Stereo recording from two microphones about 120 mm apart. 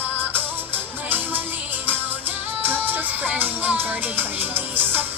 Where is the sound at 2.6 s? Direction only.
15° right (ahead or behind).